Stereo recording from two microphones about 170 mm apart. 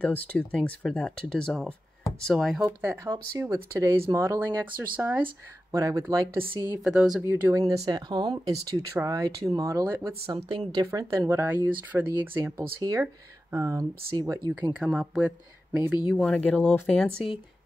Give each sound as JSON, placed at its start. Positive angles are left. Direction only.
{"t": 0.0, "sound": "speech", "side_deg": 10}
{"t": 2.6, "sound": "a woman's voice", "side_deg": -15}
{"t": 6.8, "sound": "speech", "side_deg": -5}
{"t": 7.2, "sound": "a woman's voice", "side_deg": -15}
{"t": 10.2, "sound": "a woman's voice", "side_deg": -30}
{"t": 14.7, "sound": "speech", "side_deg": -5}
{"t": 16.1, "sound": "speech", "side_deg": 5}